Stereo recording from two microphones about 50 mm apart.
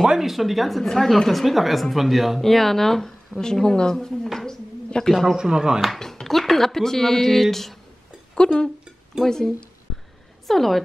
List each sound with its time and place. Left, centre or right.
0.0 s speech: centre
5.4 s speech: centre
5.8 s speech: centre
8.4 s speech: centre